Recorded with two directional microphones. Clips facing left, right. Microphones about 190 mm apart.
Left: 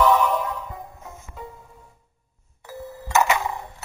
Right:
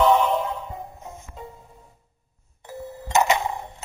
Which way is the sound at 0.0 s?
30° right (ahead or behind).